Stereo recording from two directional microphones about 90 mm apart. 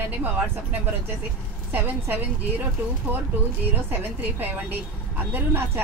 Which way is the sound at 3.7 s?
20° right (ahead or behind).